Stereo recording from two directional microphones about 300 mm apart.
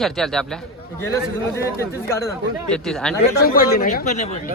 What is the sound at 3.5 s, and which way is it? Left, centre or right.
Speech, left.